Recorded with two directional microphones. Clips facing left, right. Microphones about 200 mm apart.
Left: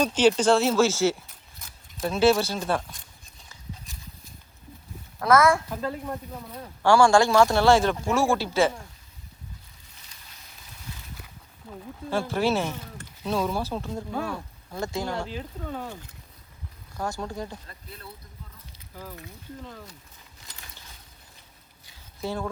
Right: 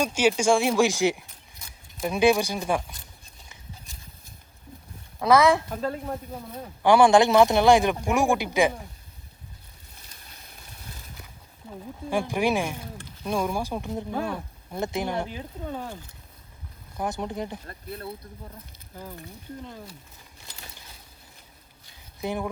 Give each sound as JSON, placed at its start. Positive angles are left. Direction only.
{"t": 0.0, "sound": "speech", "side_deg": -10}
{"t": 5.2, "sound": "speech", "side_deg": -20}
{"t": 10.1, "sound": "a sound", "side_deg": -45}
{"t": 11.7, "sound": "speech", "side_deg": -15}
{"t": 17.0, "sound": "speech", "side_deg": -20}
{"t": 17.7, "sound": "speech", "side_deg": -55}
{"t": 18.9, "sound": "speech", "side_deg": -20}
{"t": 22.2, "sound": "speech", "side_deg": -15}